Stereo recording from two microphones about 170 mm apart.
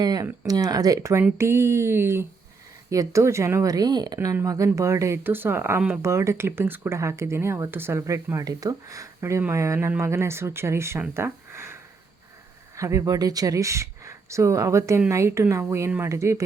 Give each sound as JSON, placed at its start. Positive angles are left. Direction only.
{"t": 0.0, "sound": "speech", "side_deg": -20}